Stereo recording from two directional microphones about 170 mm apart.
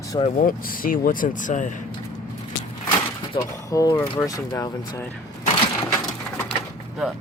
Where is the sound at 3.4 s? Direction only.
20° left (ahead or behind).